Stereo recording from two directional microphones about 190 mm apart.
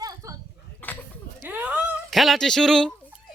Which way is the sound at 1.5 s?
10° right (ahead or behind).